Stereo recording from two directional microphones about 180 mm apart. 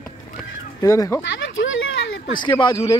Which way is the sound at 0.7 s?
20° left (ahead or behind).